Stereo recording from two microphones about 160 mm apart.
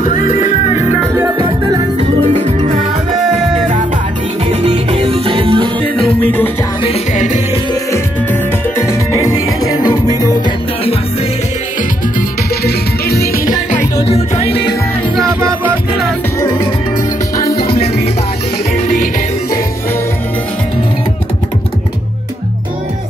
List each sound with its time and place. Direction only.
0.0 s music: 55° left (ahead or behind)
2.0 s music: 45° right (ahead or behind)
4.6 s music: 35° right (ahead or behind)
7.9 s music: 15° left (ahead or behind)
12.6 s music: 75° left (ahead or behind)
14.0 s music: 40° left (ahead or behind)
15.2 s music: 15° right (ahead or behind)
16.3 s music: 20° left (ahead or behind)